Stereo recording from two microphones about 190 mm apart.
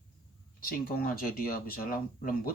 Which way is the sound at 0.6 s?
50° left (ahead or behind).